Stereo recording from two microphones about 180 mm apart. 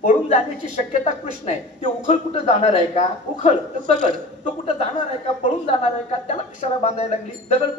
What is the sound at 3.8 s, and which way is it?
Speech, 50° right (ahead or behind).